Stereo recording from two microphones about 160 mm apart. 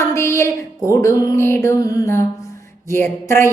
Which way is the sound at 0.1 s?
15° left (ahead or behind).